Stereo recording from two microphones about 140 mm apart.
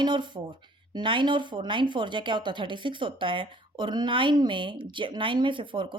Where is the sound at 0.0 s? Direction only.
35° right (ahead or behind).